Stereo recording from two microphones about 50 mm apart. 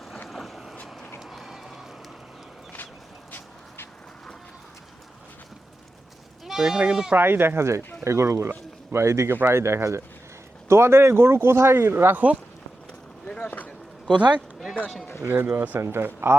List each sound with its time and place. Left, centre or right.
0.3 s vehicle: centre
1.2 s run: centre
6.4 s speech: centre
7.2 s speech: right
8.0 s speech: right
9.3 s speech: right
12.1 s speech: right
13.4 s a sound: left
15.2 s speech: right
15.8 s speech: right